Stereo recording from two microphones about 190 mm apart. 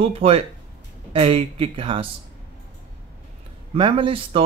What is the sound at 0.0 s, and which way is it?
Speech, 30° right (ahead or behind).